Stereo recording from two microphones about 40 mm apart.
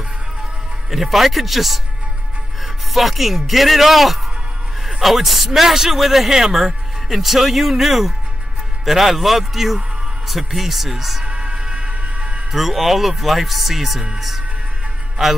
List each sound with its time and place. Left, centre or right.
0.8 s a man's voice: centre
2.9 s a man's voice: centre
11.2 s music: right
12.5 s a man's voice: centre
15.2 s a man's voice: centre